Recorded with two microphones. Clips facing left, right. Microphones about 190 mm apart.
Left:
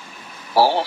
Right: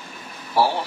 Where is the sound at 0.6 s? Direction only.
90° left.